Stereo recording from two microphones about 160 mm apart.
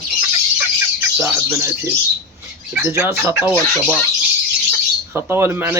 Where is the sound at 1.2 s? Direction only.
15° right (ahead or behind).